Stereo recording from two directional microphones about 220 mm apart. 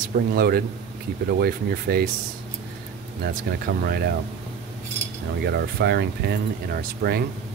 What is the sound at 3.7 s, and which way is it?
Speech, 45° right (ahead or behind).